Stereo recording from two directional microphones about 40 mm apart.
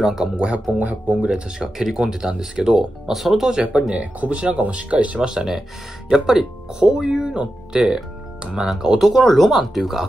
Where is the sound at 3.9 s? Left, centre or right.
Right.